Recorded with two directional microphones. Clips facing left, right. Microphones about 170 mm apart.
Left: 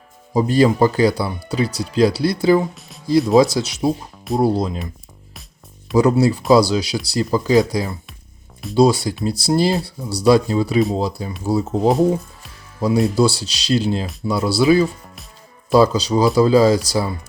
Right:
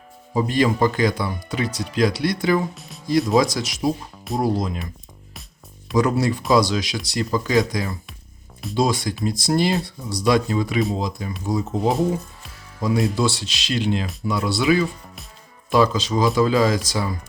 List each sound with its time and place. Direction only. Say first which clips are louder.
0.3 s speech: left 5 dB; 35° left (ahead or behind)
6.0 s speech: left 5 dB; 30° left (ahead or behind)
11.9 s speech: left 5 dB; centre (ahead or behind)
12.8 s speech: left 5 dB; 35° left (ahead or behind)